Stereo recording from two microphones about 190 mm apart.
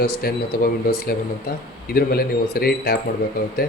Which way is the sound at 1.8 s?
50° left (ahead or behind).